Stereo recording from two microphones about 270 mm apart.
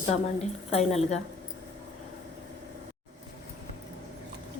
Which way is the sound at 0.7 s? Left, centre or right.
Left.